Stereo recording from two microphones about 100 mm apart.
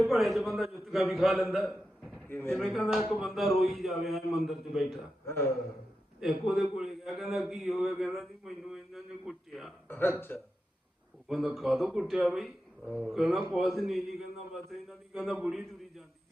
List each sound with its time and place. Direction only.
0.0 s a man's voice: centre (ahead or behind)
2.3 s speech: 20° left (ahead or behind)
2.6 s a man's voice: centre (ahead or behind)
5.2 s a man's voice: 25° left (ahead or behind)
6.1 s a man's voice: centre (ahead or behind)
9.9 s speech: 25° left (ahead or behind)
11.3 s a man's voice: centre (ahead or behind)